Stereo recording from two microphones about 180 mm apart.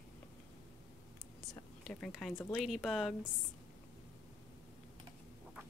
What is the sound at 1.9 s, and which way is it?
Speech, 5° left (ahead or behind).